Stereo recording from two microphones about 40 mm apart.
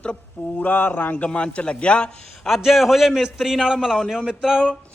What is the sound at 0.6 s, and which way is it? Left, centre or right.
Speech, left.